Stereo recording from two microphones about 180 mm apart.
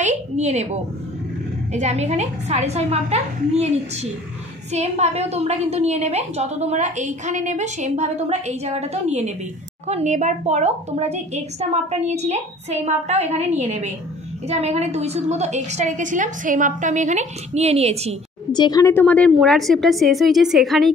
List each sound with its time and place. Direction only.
0.0 s a woman's voice: 40° right (ahead or behind)
1.7 s a woman's voice: 40° right (ahead or behind)
18.5 s a woman's voice: 20° left (ahead or behind); by 20.9 s centre (ahead or behind)